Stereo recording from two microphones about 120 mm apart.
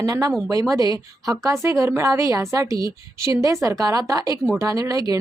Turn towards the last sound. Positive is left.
turn(degrees=-30)  # may be behind; listen again after turning